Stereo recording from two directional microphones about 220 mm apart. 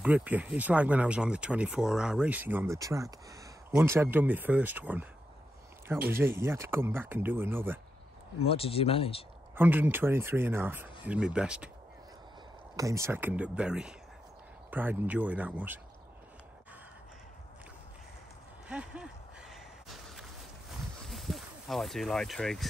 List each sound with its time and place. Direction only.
0.0 s speech: 5° right (ahead or behind)
6.0 s speech: 10° right (ahead or behind)
8.5 s speech: 25° left (ahead or behind)
9.6 s speech: 10° right (ahead or behind)
12.7 s speech: 15° right (ahead or behind)
18.7 s a sound: 5° right (ahead or behind)
21.1 s speech: centre (ahead or behind)